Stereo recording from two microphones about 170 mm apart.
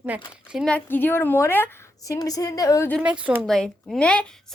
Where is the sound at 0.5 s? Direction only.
5° left (ahead or behind).